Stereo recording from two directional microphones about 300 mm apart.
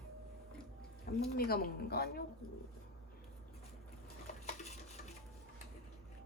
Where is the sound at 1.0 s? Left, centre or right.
Left.